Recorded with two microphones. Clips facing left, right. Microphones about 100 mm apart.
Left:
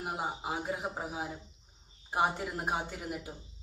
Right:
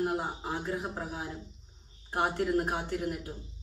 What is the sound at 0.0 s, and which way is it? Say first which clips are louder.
Speech: right 4 dB; 5° left (ahead or behind).